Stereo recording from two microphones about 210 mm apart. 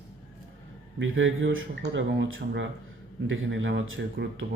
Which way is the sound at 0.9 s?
65° right (ahead or behind).